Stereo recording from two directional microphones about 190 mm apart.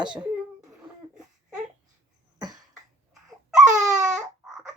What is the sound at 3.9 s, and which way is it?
Baby cry, 5° right (ahead or behind).